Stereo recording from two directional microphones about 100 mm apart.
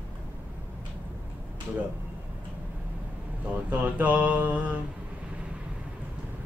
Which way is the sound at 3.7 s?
15° right (ahead or behind).